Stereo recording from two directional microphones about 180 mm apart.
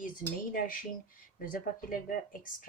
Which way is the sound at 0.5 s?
50° left (ahead or behind).